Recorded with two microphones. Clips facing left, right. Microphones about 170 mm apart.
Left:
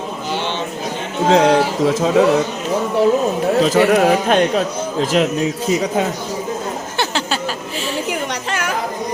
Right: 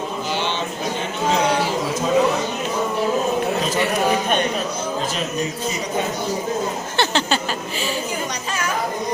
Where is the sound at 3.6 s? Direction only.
80° left.